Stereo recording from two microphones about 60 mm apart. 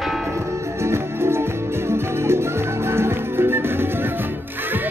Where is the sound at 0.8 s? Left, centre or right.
Right.